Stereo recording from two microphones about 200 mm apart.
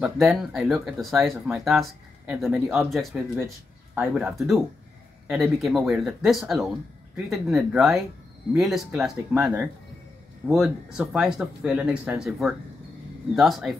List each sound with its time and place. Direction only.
0.0 s speech: centre (ahead or behind)